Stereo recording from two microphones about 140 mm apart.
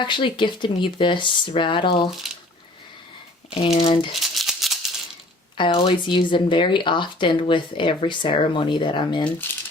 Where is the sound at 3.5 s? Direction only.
40° left (ahead or behind).